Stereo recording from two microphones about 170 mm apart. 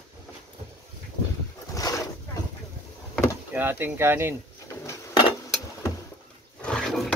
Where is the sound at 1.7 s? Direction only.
20° left (ahead or behind).